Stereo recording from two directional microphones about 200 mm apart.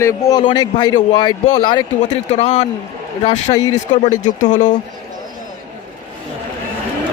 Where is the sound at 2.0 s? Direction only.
35° left (ahead or behind).